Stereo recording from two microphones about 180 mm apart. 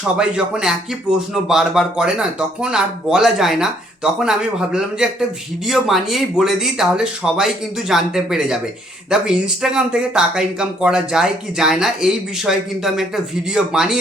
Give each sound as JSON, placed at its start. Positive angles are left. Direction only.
{"t": 0.2, "sound": "speech", "side_deg": -5}